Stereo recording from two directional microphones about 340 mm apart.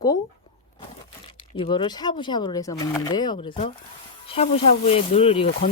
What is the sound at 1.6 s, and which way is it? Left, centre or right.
Speech, centre.